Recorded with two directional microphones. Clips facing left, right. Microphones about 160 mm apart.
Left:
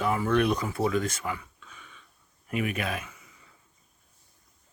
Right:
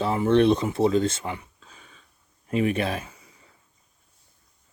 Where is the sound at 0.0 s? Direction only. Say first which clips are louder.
Right 5 dB; 25° right (ahead or behind).